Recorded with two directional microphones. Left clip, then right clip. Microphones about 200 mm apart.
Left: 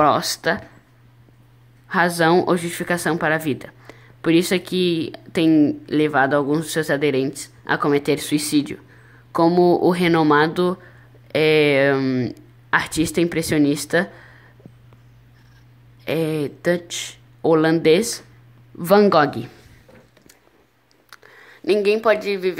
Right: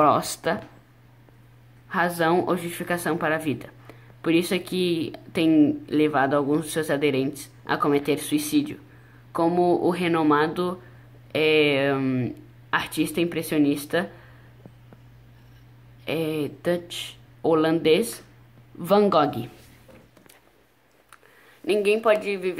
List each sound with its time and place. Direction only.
0.0 s speech: centre (ahead or behind)
1.9 s a woman's voice: 10° left (ahead or behind)
16.0 s a woman's voice: 15° left (ahead or behind)
21.1 s speech: 20° left (ahead or behind)